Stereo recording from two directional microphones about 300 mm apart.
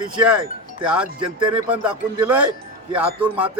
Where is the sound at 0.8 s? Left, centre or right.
Centre.